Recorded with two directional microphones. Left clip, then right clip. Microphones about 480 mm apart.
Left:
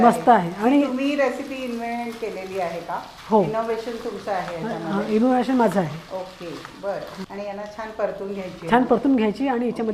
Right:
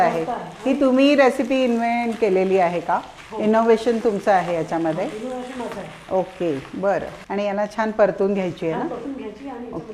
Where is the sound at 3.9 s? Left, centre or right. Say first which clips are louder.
Right 9 dB; right.